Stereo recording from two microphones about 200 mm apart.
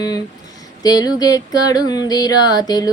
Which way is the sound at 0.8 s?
20° left (ahead or behind).